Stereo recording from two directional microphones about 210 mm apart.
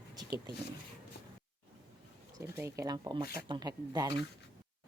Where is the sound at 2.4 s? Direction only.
10° right (ahead or behind).